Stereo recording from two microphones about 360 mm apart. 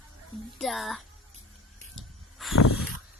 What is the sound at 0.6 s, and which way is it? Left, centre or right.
Speech, centre.